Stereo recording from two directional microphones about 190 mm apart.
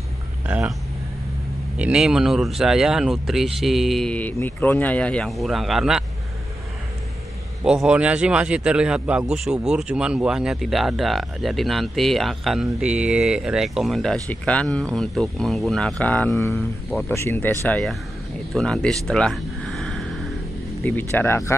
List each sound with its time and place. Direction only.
0.5 s speech: 10° right (ahead or behind)
1.8 s speech: 5° right (ahead or behind)
7.6 s speech: 5° right (ahead or behind); by 21.5 s 15° left (ahead or behind)